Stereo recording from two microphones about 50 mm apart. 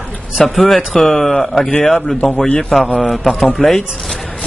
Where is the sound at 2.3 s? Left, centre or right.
Left.